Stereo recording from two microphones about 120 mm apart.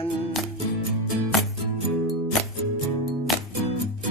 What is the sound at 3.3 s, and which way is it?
Music, centre (ahead or behind).